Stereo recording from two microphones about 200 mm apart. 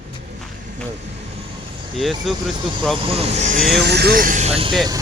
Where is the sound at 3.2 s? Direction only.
35° right (ahead or behind).